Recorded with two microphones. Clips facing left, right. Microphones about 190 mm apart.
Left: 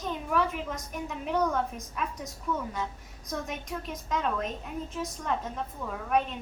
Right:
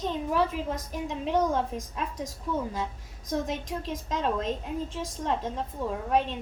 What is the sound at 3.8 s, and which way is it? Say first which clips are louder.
A woman's voice: right 1 dB; 30° right (ahead or behind).